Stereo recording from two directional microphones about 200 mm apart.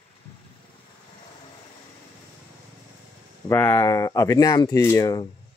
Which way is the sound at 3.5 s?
10° left (ahead or behind).